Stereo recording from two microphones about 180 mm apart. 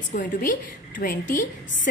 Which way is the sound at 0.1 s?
45° left (ahead or behind).